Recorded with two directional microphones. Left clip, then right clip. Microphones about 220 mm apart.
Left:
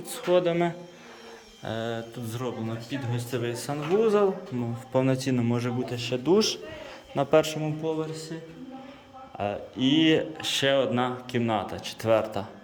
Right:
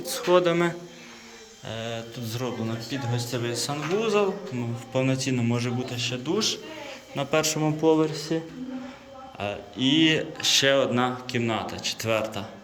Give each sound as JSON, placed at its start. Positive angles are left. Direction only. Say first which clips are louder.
{"t": 0.1, "sound": "speech", "louder": "right 3 dB", "side_deg": 10}
{"t": 1.6, "sound": "speech", "louder": "left 1 dB", "side_deg": 30}
{"t": 7.2, "sound": "speech", "louder": "left 3 dB", "side_deg": 20}
{"t": 7.5, "sound": "speech", "louder": "right 8 dB", "side_deg": 0}
{"t": 7.9, "sound": "a man's voice", "louder": "right 8 dB", "side_deg": -30}
{"t": 9.4, "sound": "speech", "louder": "even", "side_deg": 20}